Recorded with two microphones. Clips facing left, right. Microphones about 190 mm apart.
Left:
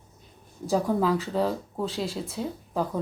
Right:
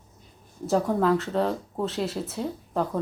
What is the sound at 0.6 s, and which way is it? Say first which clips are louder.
Speech: right 1 dB; centre (ahead or behind).